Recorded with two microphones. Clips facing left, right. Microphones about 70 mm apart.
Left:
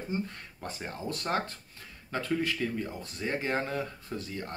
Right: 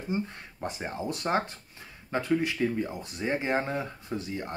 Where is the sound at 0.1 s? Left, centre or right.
Centre.